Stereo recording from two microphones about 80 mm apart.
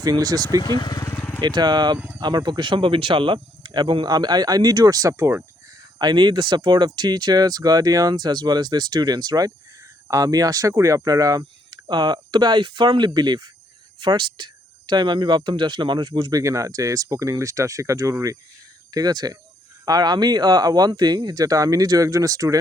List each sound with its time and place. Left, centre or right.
0.0 s speech: right
0.8 s speech: left
1.1 s vehicle: left
1.4 s speech: right
6.0 s speech: right
11.7 s speech: right
13.1 s speech: right
14.0 s speech: right
16.3 s speech: right
18.9 s speech: right